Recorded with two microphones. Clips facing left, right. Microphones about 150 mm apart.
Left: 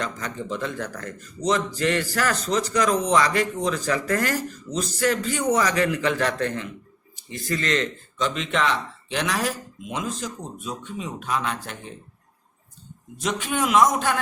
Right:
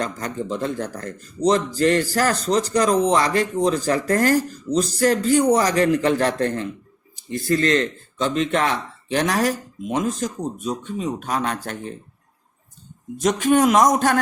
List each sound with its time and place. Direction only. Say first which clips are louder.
0.0 s speech: right 4 dB; 35° right (ahead or behind)
13.1 s speech: right 9 dB; 45° right (ahead or behind)